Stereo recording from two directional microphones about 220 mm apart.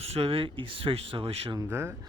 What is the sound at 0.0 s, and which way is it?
Speech, 25° right (ahead or behind).